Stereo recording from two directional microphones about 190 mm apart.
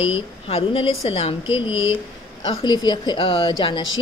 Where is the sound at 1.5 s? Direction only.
90° left.